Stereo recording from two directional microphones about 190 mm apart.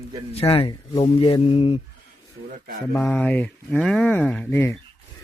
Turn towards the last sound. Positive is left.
turn(degrees=10)  # may be behind; listen again after turning